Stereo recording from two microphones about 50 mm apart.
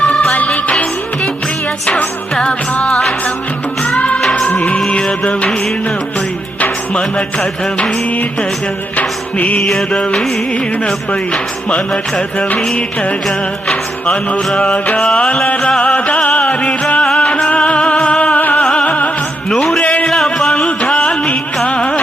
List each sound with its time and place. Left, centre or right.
0.0 s music: left
2.4 s music: left
6.6 s music: left
9.0 s music: left
9.9 s music: centre
12.7 s music: left
16.0 s music: left
18.6 s music: centre
18.9 s music: left
19.5 s music: centre
19.8 s music: left
20.1 s music: centre
20.7 s music: left